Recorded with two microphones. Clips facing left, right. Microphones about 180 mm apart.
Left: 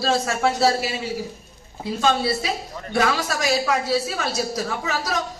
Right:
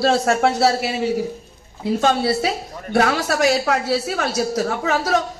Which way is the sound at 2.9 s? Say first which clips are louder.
Right 4 dB; 65° right (ahead or behind).